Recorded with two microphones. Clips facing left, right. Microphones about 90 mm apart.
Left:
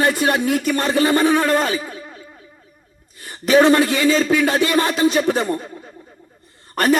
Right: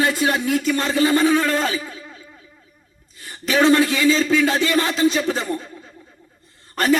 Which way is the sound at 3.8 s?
40° left (ahead or behind).